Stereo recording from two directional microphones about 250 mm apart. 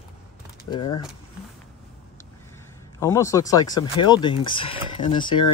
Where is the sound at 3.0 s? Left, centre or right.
Centre.